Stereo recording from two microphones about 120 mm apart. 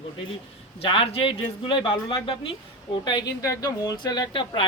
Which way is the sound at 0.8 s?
50° left (ahead or behind).